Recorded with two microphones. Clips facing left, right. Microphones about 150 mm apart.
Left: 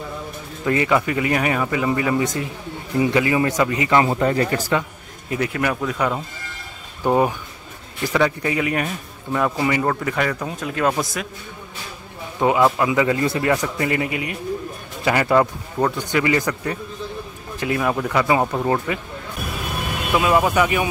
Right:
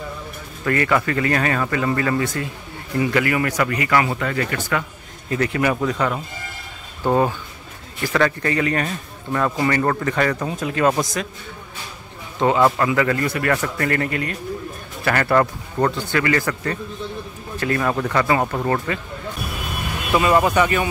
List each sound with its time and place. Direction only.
0.7 s speech: 15° left (ahead or behind)
4.1 s speech: 35° left (ahead or behind)
5.3 s speech: 5° left (ahead or behind)
5.9 s speech: 15° left (ahead or behind)
12.4 s speech: 10° left (ahead or behind)
20.1 s speech: 5° left (ahead or behind)